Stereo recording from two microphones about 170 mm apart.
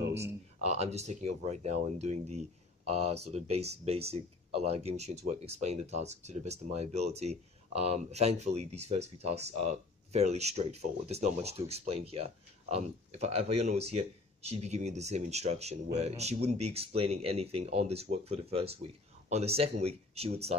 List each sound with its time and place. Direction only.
0.7 s speech: 40° right (ahead or behind)